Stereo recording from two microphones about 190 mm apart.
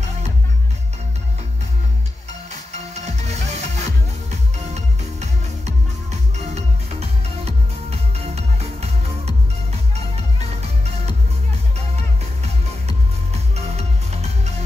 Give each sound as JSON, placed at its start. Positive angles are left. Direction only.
{"t": 2.7, "sound": "music", "side_deg": -35}
{"t": 6.3, "sound": "music", "side_deg": -35}
{"t": 12.8, "sound": "music", "side_deg": -35}